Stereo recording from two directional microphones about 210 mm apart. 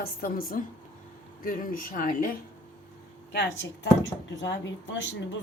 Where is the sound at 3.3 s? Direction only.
50° left (ahead or behind).